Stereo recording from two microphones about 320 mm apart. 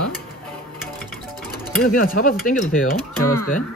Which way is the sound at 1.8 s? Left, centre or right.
Left.